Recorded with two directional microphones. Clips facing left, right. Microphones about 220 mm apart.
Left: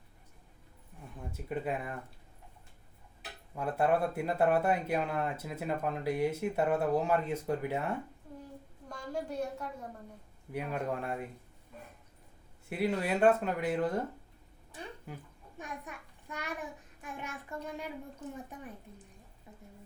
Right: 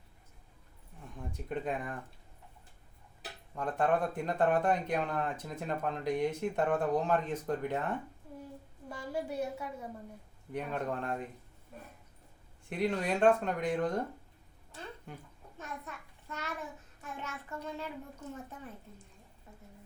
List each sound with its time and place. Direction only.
1.2 s speech: 5° left (ahead or behind)
3.5 s speech: 10° left (ahead or behind)
8.9 s a woman's voice: 5° right (ahead or behind)
10.5 s speech: 10° left (ahead or behind)
12.6 s a child's voice: 5° left (ahead or behind)